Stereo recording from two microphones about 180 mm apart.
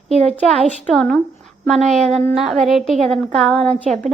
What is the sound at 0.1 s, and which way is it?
Speech, 35° right (ahead or behind).